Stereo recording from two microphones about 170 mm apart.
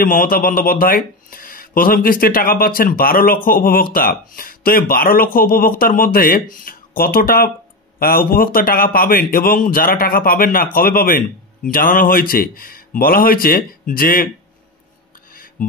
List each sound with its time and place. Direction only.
0.0 s speech: 55° left (ahead or behind)